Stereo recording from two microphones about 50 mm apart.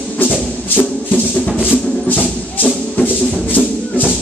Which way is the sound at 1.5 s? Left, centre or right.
Left.